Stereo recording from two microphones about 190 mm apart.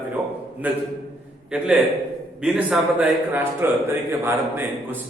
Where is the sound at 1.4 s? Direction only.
5° right (ahead or behind).